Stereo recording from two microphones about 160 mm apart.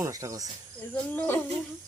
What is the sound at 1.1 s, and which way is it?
Speech, 10° left (ahead or behind).